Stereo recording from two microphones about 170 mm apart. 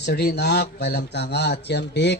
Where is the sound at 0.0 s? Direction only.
75° left (ahead or behind).